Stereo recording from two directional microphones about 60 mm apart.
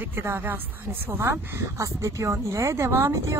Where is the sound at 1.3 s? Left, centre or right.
Right.